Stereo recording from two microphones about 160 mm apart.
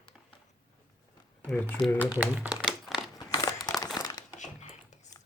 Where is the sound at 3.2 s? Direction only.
25° left (ahead or behind).